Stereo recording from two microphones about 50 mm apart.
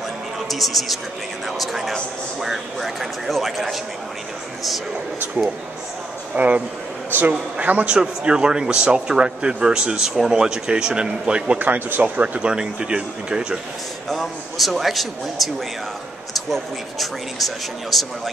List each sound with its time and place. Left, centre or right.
0.5 s a man's voice: centre
6.3 s a man's voice: right
7.1 s a man's voice: right
7.6 s speech: right
7.9 s a man's voice: centre
11.6 s speech: right
12.4 s a man's voice: centre
14.0 s speech: centre